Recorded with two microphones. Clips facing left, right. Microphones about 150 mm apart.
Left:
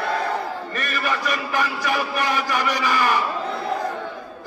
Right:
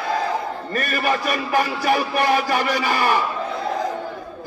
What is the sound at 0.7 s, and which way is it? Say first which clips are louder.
A man's voice: right 7 dB; 45° right (ahead or behind).